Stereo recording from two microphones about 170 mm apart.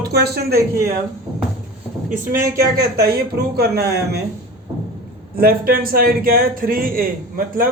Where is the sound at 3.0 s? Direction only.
70° right (ahead or behind).